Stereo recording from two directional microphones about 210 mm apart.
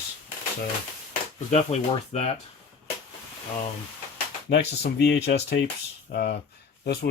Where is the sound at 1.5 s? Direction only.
30° left (ahead or behind).